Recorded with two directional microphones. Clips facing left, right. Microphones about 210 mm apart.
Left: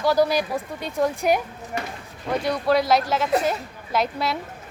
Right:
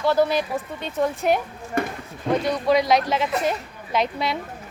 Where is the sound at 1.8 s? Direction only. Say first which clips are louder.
Right 7 dB; 55° right (ahead or behind).